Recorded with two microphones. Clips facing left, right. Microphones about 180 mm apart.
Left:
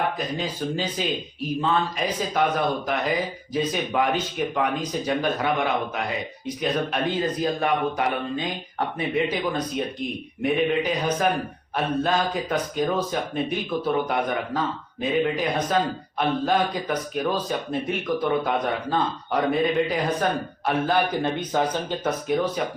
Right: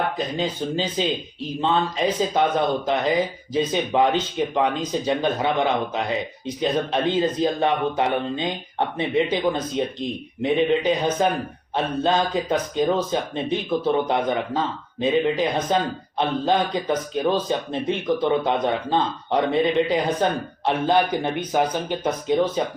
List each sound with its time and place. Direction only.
0.3 s a man's voice: 25° right (ahead or behind)
22.6 s a man's voice: 25° right (ahead or behind)